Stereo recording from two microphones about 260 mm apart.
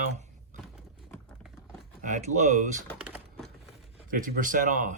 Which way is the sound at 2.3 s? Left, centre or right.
Right.